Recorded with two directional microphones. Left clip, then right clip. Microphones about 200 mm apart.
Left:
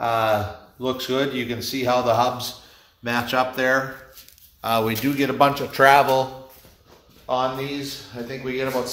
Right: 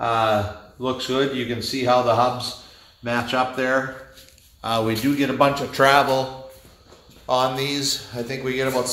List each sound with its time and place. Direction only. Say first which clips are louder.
0.0 s speech: right 1 dB; 25° left (ahead or behind)
3.0 s speech: even; 45° left (ahead or behind); by 6.2 s 25° left (ahead or behind)
7.2 s speech: right 3 dB; 25° right (ahead or behind)
8.1 s speech: right 3 dB; 45° right (ahead or behind)